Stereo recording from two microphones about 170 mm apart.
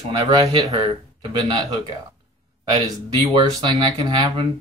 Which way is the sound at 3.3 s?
25° right (ahead or behind).